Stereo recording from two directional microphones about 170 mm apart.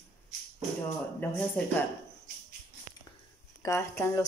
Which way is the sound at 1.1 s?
10° left (ahead or behind).